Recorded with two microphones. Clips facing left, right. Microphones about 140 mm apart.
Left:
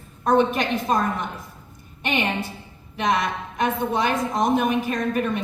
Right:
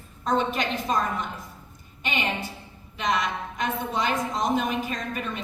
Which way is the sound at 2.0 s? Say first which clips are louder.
Left 4 dB; 55° left (ahead or behind).